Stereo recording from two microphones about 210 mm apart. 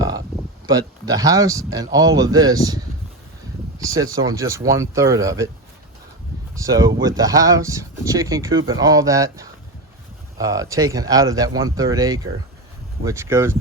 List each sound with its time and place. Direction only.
0.7 s speech: 15° right (ahead or behind)
3.8 s speech: 15° right (ahead or behind)
6.5 s speech: 15° right (ahead or behind)